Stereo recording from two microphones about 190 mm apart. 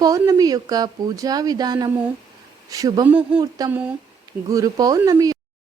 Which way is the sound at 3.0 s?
5° right (ahead or behind).